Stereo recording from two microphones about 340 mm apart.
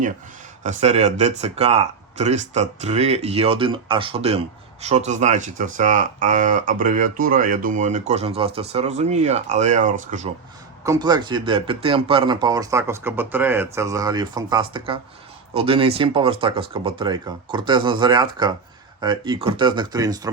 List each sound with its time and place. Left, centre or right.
0.6 s speech: right
10.8 s speech: centre